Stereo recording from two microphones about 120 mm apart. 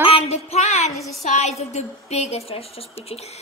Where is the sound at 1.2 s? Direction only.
75° left (ahead or behind).